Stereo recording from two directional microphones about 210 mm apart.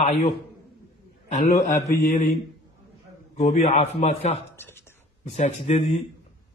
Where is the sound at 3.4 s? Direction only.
30° left (ahead or behind).